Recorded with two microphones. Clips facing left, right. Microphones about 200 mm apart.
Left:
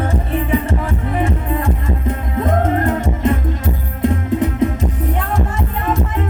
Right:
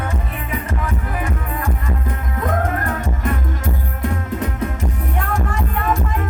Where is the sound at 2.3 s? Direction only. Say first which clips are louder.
Left 5 dB; 25° left (ahead or behind).